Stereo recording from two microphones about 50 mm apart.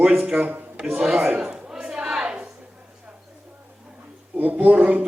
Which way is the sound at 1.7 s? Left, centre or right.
Centre.